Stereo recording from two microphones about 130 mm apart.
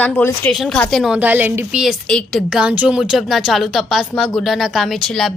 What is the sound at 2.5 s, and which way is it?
Speech, 5° right (ahead or behind).